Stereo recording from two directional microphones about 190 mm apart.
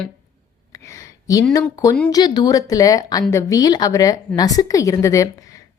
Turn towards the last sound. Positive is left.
turn(degrees=15)  # may be behind; listen again after turning